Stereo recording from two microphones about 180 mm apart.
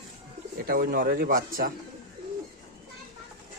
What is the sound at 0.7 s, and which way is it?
Speech, 55° right (ahead or behind).